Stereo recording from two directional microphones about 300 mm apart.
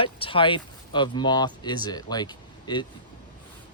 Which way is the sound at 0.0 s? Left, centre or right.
Centre.